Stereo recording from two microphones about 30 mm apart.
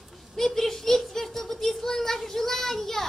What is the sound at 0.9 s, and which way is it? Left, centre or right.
Child singing, centre.